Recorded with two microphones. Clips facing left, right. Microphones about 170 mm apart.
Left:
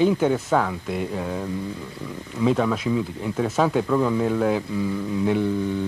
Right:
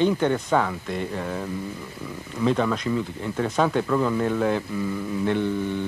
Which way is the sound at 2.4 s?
5° left (ahead or behind).